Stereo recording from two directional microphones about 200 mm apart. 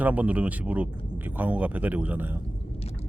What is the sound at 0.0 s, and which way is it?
Speech, 5° right (ahead or behind).